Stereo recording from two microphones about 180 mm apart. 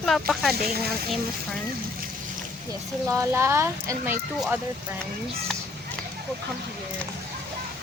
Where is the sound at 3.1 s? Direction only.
15° right (ahead or behind).